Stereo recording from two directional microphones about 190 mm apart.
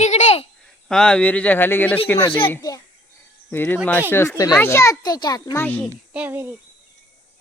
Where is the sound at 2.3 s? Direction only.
25° left (ahead or behind); by 5.8 s 10° left (ahead or behind).